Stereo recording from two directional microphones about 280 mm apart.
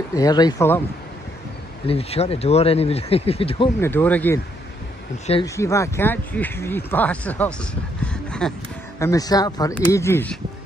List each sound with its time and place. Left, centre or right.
0.1 s speech: centre
1.9 s speech: left; by 4.4 s centre
5.2 s speech: left
5.6 s speech: centre
8.0 s a sound: centre
9.0 s speech: centre